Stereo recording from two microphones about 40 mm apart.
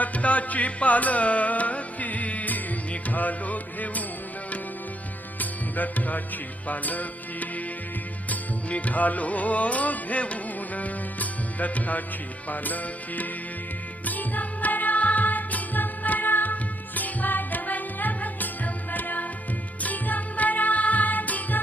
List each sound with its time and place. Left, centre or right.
0.0 s music: left
5.4 s music: left